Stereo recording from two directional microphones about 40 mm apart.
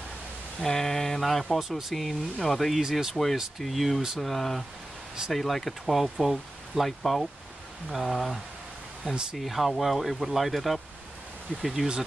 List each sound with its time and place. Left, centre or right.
0.6 s speech: centre
1.6 s speech: centre
2.8 s speech: centre
3.5 s speech: centre
9.0 s speech: centre
9.4 s speech: centre